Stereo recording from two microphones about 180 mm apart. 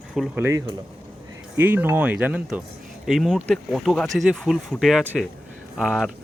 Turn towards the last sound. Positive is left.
turn(degrees=0)  # may be behind; listen again after turning